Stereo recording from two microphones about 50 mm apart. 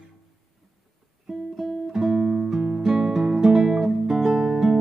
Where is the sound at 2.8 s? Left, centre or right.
Centre.